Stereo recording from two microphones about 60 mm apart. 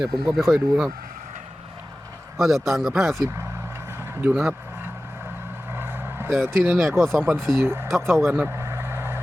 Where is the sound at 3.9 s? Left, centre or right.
Right.